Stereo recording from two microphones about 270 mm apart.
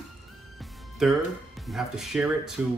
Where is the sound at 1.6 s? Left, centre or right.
Centre.